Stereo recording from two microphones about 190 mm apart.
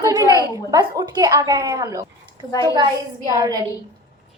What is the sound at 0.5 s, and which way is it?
A woman's voice, 20° right (ahead or behind).